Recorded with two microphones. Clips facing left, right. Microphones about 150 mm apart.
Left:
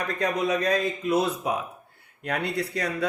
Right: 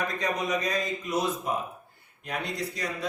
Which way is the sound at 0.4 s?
60° left (ahead or behind).